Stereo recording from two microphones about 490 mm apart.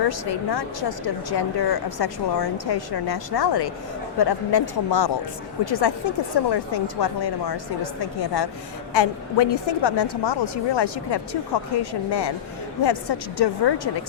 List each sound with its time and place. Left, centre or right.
0.5 s a woman's voice: left